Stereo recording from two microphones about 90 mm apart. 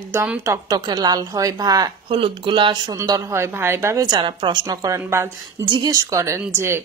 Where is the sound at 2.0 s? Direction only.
75° right (ahead or behind).